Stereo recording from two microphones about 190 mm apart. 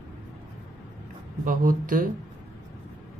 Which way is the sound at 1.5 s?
45° right (ahead or behind).